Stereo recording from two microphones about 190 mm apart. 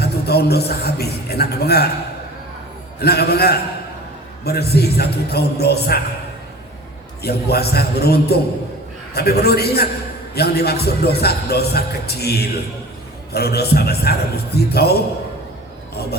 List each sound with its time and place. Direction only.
0.0 s a sound: 55° left (ahead or behind)
3.0 s speech: 55° left (ahead or behind)
7.2 s speech: 55° left (ahead or behind)